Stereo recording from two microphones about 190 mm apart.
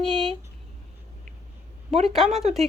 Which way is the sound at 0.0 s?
Centre (ahead or behind).